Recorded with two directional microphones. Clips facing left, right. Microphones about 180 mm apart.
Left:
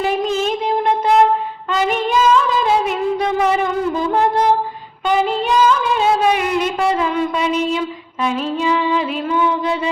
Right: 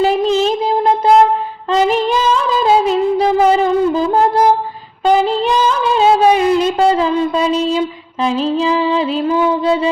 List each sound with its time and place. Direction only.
0.0 s music of bollywood: 30° right (ahead or behind)
1.7 s female singing: 35° right (ahead or behind)
2.6 s music: 30° right (ahead or behind)
5.0 s a sound: 35° right (ahead or behind)